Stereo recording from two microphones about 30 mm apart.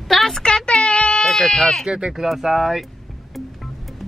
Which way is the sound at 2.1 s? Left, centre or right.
Centre.